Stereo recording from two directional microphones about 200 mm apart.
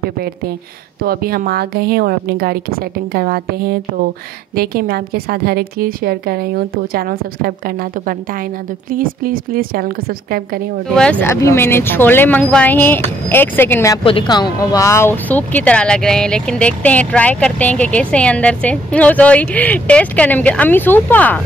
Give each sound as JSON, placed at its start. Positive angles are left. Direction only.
{"t": 1.0, "sound": "a woman's voice", "side_deg": -50}
{"t": 11.0, "sound": "speech", "side_deg": 5}
{"t": 14.0, "sound": "speech", "side_deg": 25}